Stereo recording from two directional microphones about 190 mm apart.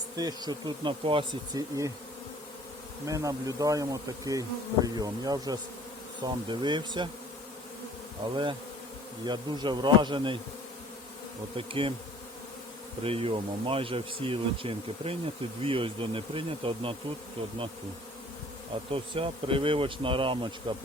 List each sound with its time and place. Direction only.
0.2 s speech: 20° right (ahead or behind)
3.1 s speech: 15° right (ahead or behind)
8.2 s speech: 25° right (ahead or behind)
11.5 s speech: 30° right (ahead or behind)
13.0 s speech: 30° right (ahead or behind)
18.9 s speech: 30° right (ahead or behind)